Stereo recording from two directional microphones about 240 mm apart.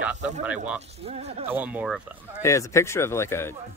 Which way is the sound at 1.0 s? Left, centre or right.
Right.